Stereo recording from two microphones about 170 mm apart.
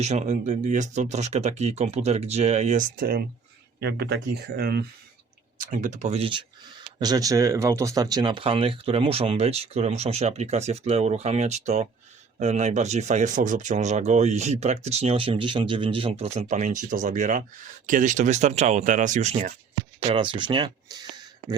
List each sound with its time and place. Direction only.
0.0 s speech: 40° right (ahead or behind); by 3.2 s 65° right (ahead or behind)
3.8 s speech: 80° right
5.5 s speech: 50° right (ahead or behind); by 6.4 s 35° right (ahead or behind)
7.0 s speech: 20° right (ahead or behind); by 19.5 s 45° right (ahead or behind)
20.1 s speech: 30° right (ahead or behind)